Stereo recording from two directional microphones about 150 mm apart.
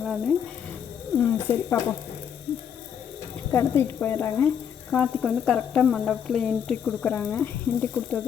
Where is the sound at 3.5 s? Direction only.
15° left (ahead or behind).